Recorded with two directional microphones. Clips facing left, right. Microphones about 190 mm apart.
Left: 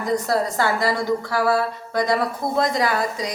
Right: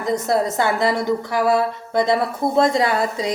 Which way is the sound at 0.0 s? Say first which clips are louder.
Right 2 dB; 20° right (ahead or behind).